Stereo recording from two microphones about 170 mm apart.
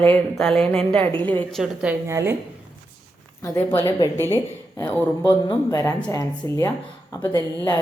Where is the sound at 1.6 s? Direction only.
5° right (ahead or behind).